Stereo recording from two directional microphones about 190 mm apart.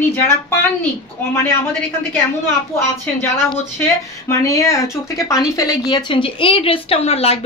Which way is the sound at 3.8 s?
15° left (ahead or behind).